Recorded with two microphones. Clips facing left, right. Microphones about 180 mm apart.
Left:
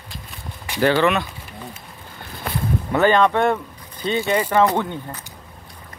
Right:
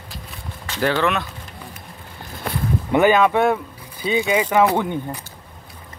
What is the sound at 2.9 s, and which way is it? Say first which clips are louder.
Speech: right 1 dB; 10° right (ahead or behind).